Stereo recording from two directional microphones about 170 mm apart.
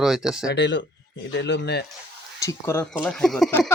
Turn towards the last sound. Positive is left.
turn(degrees=10)  # may be behind; listen again after turning